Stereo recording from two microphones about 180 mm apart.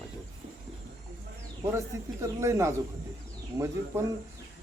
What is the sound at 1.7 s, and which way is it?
Speech, 15° right (ahead or behind).